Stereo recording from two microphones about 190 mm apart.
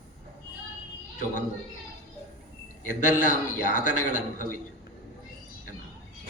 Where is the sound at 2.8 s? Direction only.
45° left (ahead or behind).